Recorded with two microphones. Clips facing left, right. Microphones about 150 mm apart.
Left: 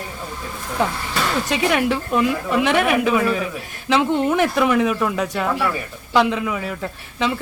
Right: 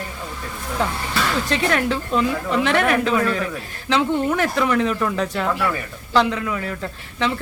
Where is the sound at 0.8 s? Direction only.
15° left (ahead or behind).